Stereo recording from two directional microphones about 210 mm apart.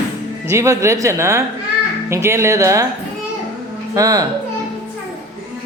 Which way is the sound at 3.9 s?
15° right (ahead or behind).